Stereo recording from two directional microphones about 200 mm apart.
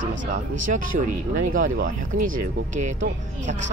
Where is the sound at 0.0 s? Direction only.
65° right (ahead or behind).